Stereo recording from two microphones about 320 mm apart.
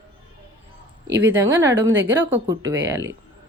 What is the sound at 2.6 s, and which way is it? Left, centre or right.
Speech, right.